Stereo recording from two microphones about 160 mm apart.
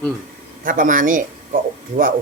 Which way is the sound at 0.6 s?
55° right (ahead or behind).